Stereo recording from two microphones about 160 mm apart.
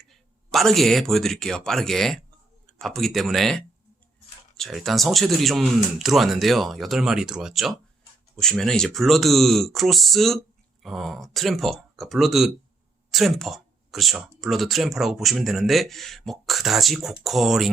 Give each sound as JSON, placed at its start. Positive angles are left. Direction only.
{"t": 0.0, "sound": "speech", "side_deg": 0}